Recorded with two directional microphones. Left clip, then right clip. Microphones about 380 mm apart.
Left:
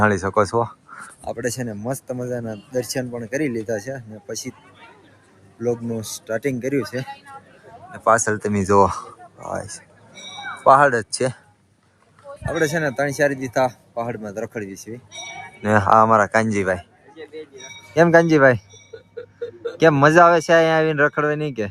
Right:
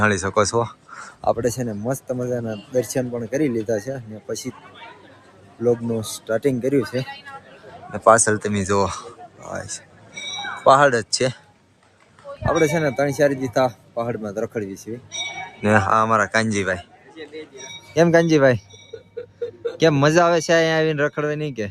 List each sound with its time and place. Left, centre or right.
0.0 s a man's voice: centre
5.6 s a man's voice: centre
12.5 s a man's voice: centre
17.2 s a sound: centre
17.8 s speech: centre